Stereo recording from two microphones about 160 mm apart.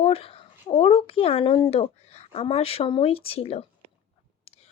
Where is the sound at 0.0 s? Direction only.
35° left (ahead or behind).